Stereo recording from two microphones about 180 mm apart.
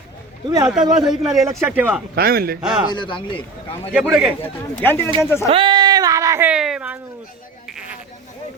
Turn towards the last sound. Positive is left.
turn(degrees=-5)  # may be behind; listen again after turning